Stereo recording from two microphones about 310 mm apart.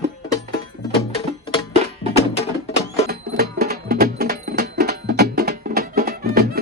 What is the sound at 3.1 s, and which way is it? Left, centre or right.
Music, right.